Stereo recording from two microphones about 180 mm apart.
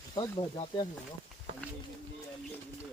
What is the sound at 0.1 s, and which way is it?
Speech, 25° left (ahead or behind).